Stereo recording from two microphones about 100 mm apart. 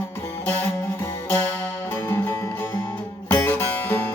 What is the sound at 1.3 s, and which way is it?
Music, 20° left (ahead or behind).